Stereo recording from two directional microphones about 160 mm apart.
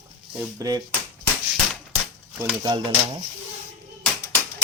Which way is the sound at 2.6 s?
30° right (ahead or behind).